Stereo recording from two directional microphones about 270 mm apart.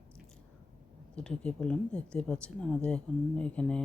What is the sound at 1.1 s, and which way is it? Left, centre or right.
Speech, centre.